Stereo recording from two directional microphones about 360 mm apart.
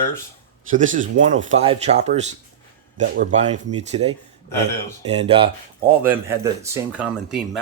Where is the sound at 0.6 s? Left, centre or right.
Right.